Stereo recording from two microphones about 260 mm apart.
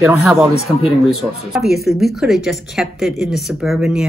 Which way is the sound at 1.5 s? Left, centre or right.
Centre.